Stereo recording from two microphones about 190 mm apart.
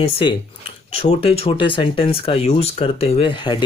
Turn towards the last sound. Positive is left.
turn(degrees=25)  # may be behind; listen again after turning